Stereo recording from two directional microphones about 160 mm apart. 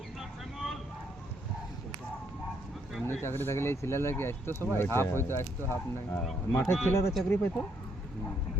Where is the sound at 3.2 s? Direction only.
15° left (ahead or behind).